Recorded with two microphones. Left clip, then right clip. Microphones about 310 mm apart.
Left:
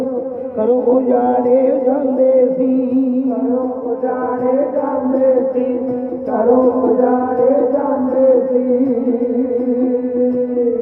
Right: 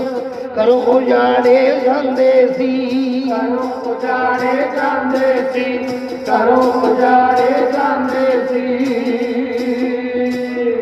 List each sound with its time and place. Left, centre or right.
0.6 s speech: right